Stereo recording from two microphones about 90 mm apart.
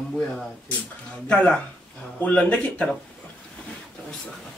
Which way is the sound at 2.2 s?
15° left (ahead or behind).